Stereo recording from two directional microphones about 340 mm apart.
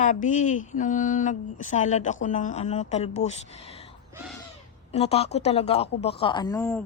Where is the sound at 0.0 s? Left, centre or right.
Left.